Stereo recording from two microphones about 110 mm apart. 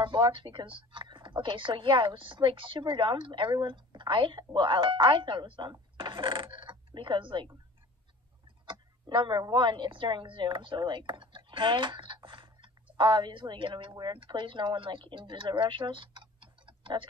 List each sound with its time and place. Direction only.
0.0 s speech: 50° right (ahead or behind)
8.6 s a sound: 50° right (ahead or behind)
9.4 s speech: 45° right (ahead or behind)